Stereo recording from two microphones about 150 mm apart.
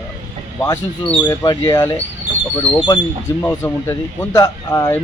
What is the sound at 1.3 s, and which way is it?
Speech, 25° left (ahead or behind).